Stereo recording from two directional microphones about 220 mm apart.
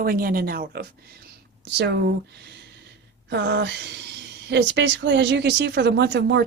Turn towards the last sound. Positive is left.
turn(degrees=-50)  # may be behind; listen again after turning